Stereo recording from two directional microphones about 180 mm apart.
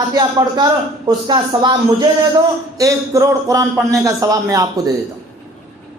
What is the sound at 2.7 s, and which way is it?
Music, 20° right (ahead or behind).